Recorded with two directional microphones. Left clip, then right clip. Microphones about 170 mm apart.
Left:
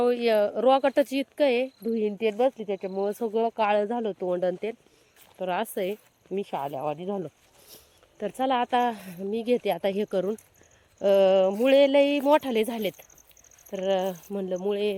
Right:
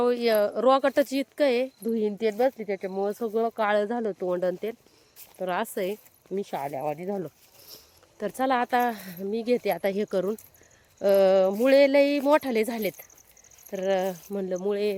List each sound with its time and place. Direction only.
0.0 s speech: centre (ahead or behind)
2.1 s speech: 15° left (ahead or behind); by 6.0 s centre (ahead or behind)
6.6 s speech: 15° left (ahead or behind)
7.2 s a sound: 5° left (ahead or behind)
8.2 s speech: 5° right (ahead or behind)